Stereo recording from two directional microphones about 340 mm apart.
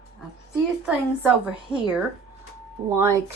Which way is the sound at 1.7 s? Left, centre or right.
Centre.